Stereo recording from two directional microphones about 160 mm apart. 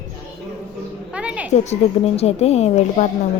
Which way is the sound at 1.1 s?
5° right (ahead or behind).